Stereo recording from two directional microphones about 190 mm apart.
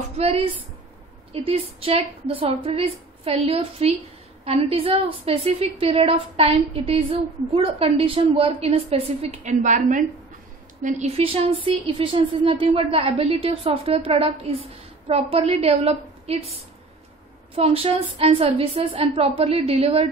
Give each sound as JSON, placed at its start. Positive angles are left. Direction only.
{"t": 0.2, "sound": "a woman's voice", "side_deg": -30}
{"t": 17.6, "sound": "a woman's voice", "side_deg": -30}